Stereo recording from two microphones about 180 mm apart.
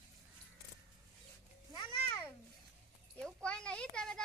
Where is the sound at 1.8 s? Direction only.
20° left (ahead or behind).